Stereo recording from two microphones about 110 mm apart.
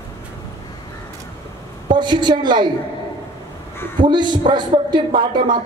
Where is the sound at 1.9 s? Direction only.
45° right (ahead or behind).